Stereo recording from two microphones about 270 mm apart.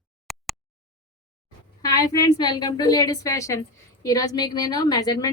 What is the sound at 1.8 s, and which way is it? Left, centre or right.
A woman's voice, centre.